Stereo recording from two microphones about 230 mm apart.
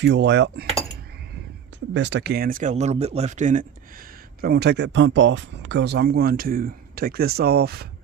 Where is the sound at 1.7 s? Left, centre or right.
Right.